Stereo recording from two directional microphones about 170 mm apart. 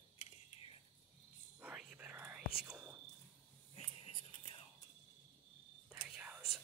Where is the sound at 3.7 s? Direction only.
30° left (ahead or behind).